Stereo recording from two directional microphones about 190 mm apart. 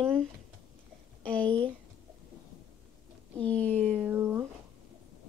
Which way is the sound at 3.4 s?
10° left (ahead or behind).